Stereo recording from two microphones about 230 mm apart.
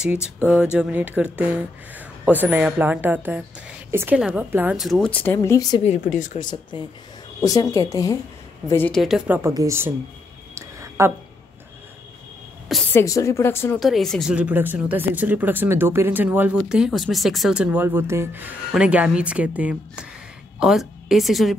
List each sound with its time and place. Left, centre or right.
0.0 s a woman's voice: centre
5.9 s speech: left
6.4 s a woman's voice: centre
9.4 s speech: centre
10.5 s a sound: centre
12.9 s a woman's voice: centre